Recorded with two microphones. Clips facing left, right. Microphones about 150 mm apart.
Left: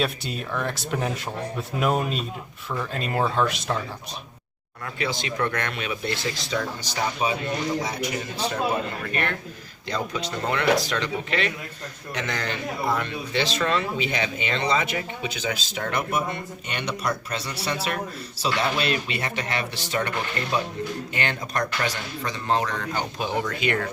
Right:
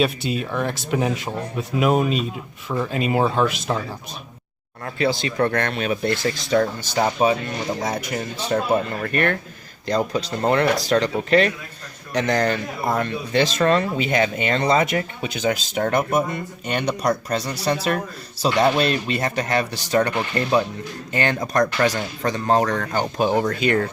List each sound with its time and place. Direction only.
0.0 s speech: 5° right (ahead or behind)
4.9 s speech: 35° right (ahead or behind)
9.8 s speech: 35° right (ahead or behind)